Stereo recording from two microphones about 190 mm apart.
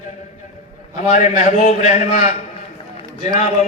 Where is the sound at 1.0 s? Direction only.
40° left (ahead or behind).